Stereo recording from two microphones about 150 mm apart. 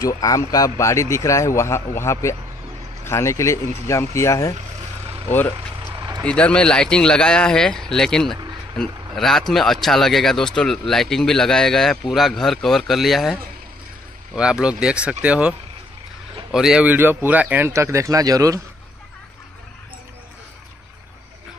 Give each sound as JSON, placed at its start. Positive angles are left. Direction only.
{"t": 0.0, "sound": "a man's voice", "side_deg": 25}
{"t": 5.9, "sound": "a sound", "side_deg": -25}
{"t": 6.2, "sound": "speech", "side_deg": 5}
{"t": 16.5, "sound": "speech", "side_deg": -5}